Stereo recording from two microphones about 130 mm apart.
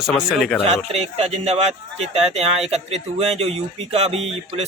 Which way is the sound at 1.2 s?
55° right (ahead or behind).